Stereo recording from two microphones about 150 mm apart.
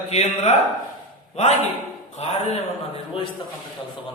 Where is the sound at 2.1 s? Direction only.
45° left (ahead or behind).